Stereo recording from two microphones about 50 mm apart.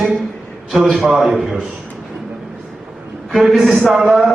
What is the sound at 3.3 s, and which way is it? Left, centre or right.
Speech, centre.